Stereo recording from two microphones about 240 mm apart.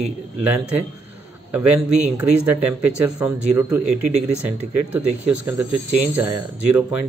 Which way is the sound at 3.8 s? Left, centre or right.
Right.